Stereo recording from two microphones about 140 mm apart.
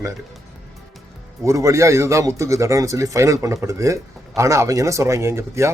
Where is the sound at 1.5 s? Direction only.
20° right (ahead or behind).